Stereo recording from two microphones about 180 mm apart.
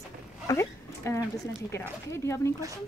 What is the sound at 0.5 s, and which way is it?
A woman's voice, 15° left (ahead or behind).